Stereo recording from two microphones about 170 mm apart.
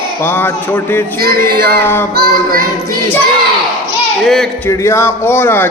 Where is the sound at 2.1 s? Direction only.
60° right (ahead or behind).